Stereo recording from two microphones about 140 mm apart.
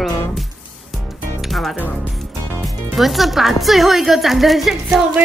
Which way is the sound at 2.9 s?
Centre (ahead or behind).